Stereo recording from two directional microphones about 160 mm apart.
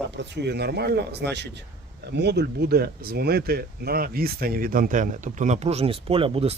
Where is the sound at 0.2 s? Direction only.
90° right.